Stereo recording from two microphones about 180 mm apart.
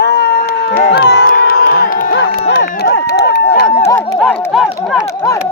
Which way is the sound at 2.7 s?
60° left (ahead or behind).